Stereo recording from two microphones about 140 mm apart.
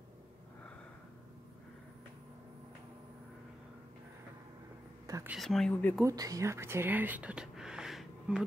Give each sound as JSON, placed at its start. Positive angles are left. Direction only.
{"t": 5.0, "sound": "whispering", "side_deg": -25}
{"t": 5.3, "sound": "speech", "side_deg": 0}
{"t": 6.0, "sound": "speech", "side_deg": -25}